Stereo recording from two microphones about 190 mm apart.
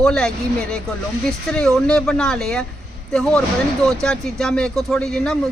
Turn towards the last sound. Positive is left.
turn(degrees=5)  # may be behind; listen again after turning